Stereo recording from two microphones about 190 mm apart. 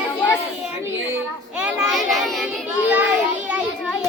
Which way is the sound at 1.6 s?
Centre (ahead or behind).